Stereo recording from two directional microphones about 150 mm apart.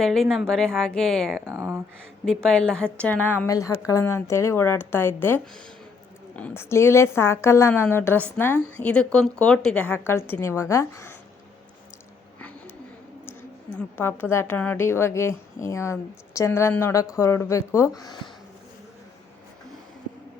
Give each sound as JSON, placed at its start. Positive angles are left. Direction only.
{"t": 0.0, "sound": "a woman's voice", "side_deg": 0}
{"t": 1.5, "sound": "speech", "side_deg": -15}
{"t": 2.2, "sound": "a woman's voice", "side_deg": 5}
{"t": 13.7, "sound": "a woman's voice", "side_deg": 15}